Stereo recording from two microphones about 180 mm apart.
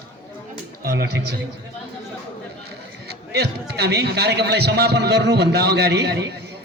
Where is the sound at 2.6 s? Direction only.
65° right (ahead or behind).